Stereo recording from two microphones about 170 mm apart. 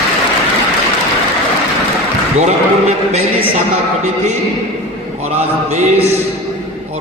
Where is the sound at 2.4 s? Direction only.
40° right (ahead or behind).